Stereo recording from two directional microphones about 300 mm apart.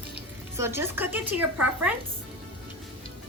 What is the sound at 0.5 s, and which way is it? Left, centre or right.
A woman's voice, centre.